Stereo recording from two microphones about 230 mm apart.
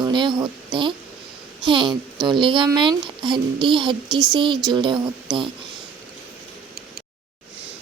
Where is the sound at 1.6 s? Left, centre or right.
Right.